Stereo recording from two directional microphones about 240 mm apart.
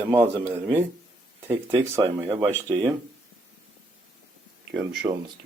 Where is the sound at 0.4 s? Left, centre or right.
Centre.